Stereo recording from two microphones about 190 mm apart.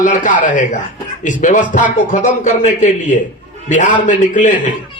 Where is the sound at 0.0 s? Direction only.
40° left (ahead or behind).